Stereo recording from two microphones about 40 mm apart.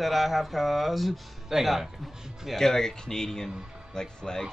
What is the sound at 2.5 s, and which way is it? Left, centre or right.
Speech, centre.